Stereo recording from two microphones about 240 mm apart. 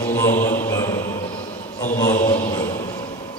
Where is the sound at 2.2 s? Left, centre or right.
Centre.